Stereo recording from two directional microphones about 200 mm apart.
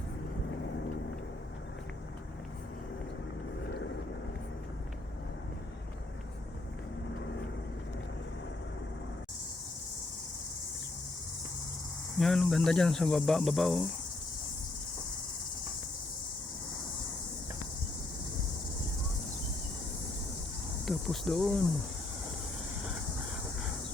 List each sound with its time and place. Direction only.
12.1 s speech: centre (ahead or behind)
20.8 s speech: centre (ahead or behind)